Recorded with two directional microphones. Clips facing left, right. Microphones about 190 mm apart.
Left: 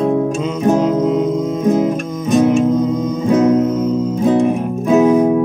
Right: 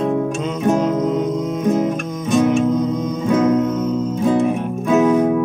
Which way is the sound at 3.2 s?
35° left (ahead or behind).